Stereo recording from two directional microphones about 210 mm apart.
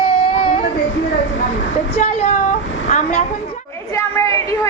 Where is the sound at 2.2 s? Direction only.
35° left (ahead or behind).